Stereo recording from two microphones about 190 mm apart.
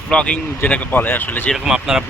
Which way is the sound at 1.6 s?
5° right (ahead or behind).